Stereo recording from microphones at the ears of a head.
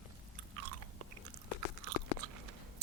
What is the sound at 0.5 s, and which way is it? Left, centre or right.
Chewing, right.